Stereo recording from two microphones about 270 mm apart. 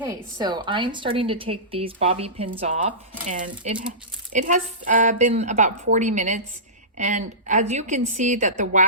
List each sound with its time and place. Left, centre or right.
0.0 s a woman's voice: centre